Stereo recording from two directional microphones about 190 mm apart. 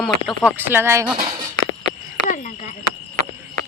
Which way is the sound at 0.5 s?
10° right (ahead or behind).